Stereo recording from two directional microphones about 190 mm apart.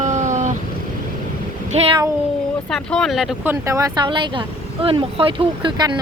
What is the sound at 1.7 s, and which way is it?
Speech, 30° right (ahead or behind).